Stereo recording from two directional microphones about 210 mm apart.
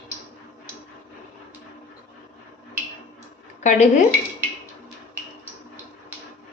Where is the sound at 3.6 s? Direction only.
35° left (ahead or behind).